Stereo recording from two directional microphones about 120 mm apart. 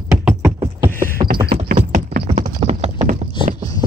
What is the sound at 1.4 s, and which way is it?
Clip-clop, 50° right (ahead or behind).